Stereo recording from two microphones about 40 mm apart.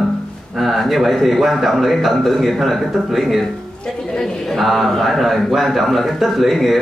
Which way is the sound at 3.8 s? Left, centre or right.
Centre.